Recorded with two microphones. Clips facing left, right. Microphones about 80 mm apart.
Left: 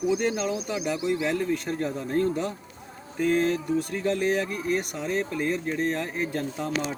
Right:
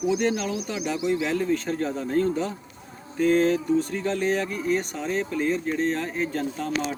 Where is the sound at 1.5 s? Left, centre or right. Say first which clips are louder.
Right 2 dB; centre.